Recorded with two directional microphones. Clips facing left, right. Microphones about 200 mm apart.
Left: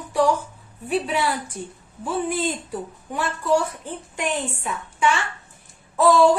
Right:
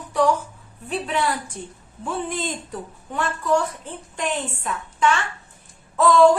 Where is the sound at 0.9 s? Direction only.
10° left (ahead or behind).